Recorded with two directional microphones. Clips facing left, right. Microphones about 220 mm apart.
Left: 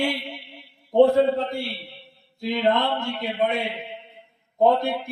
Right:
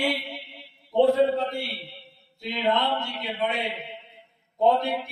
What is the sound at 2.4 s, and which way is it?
A man's voice, 50° left (ahead or behind).